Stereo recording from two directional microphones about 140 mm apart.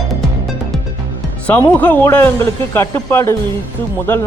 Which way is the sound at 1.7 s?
15° left (ahead or behind).